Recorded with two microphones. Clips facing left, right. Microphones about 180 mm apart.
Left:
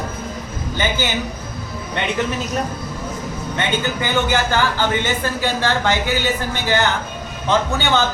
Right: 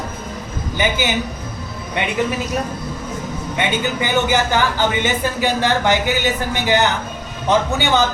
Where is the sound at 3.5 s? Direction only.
15° right (ahead or behind).